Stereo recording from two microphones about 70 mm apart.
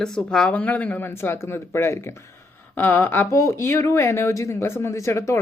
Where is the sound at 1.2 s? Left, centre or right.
Left.